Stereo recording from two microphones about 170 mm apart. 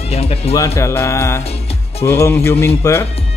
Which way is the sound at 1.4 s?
35° left (ahead or behind).